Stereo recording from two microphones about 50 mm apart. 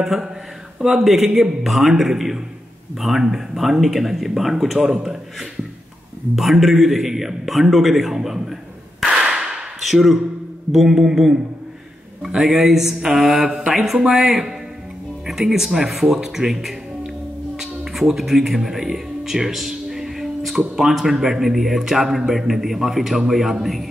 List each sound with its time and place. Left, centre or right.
0.0 s a man's voice: centre
9.1 s whip: centre
10.7 s a man's voice: centre
13.3 s speech: right
13.7 s a man's voice: centre
17.6 s music: centre
20.5 s speech: centre